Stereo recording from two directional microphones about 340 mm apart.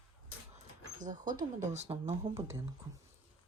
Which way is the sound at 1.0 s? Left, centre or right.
Right.